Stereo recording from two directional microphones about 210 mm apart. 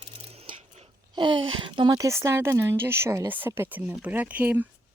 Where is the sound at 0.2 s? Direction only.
30° right (ahead or behind); by 4.7 s 10° right (ahead or behind).